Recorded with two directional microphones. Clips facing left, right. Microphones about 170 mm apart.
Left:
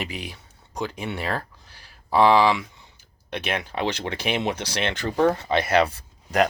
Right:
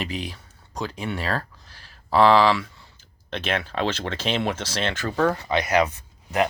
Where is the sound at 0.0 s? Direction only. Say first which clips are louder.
Right 2 dB; 15° left (ahead or behind).